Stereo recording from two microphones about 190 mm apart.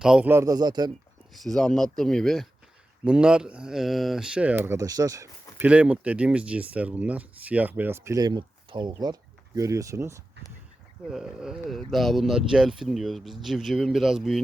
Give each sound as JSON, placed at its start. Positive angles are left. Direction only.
{"t": 0.0, "sound": "speech", "side_deg": -5}
{"t": 1.3, "sound": "speech", "side_deg": 5}
{"t": 11.1, "sound": "speech", "side_deg": -5}